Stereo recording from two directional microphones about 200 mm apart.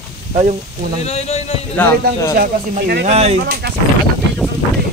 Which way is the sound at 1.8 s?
15° left (ahead or behind).